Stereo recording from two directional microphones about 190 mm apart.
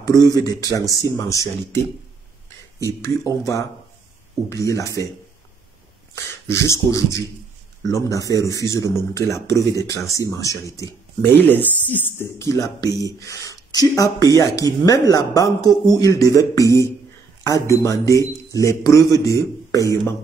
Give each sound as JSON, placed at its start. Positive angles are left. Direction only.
{"t": 0.0, "sound": "speech", "side_deg": 20}
{"t": 2.8, "sound": "speech", "side_deg": 15}
{"t": 6.5, "sound": "speech", "side_deg": 15}